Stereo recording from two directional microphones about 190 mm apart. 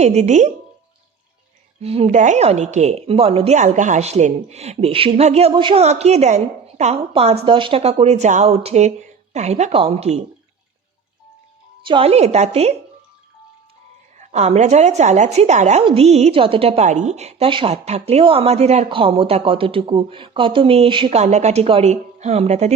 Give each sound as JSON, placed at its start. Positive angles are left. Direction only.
{"t": 0.0, "sound": "a woman's voice", "side_deg": -35}
{"t": 1.8, "sound": "a woman's voice", "side_deg": -30}
{"t": 11.9, "sound": "a woman's voice", "side_deg": -30}
{"t": 14.2, "sound": "a woman's voice", "side_deg": -40}